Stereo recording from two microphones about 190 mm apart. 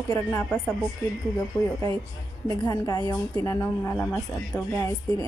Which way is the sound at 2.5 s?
20° left (ahead or behind).